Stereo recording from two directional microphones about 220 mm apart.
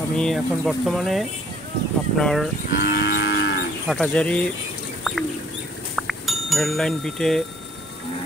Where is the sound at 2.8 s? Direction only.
50° left (ahead or behind).